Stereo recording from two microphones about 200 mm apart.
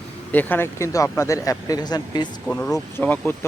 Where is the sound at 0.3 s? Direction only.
10° left (ahead or behind).